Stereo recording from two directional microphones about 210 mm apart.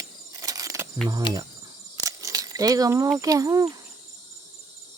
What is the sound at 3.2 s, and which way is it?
Speech, 15° right (ahead or behind).